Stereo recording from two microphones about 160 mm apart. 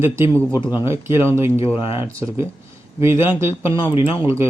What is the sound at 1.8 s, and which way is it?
Speech, 35° left (ahead or behind).